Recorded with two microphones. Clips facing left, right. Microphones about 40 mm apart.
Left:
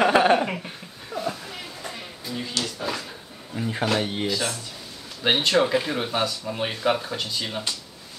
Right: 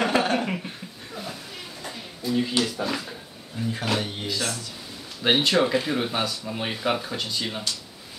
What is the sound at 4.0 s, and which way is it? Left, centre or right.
Speech, left.